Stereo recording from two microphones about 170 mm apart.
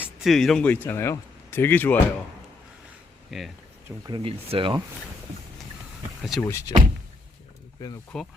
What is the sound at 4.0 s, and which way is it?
Speech, 25° right (ahead or behind).